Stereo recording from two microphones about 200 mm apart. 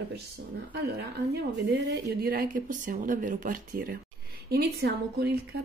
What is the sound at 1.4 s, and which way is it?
A woman's voice, 60° right (ahead or behind).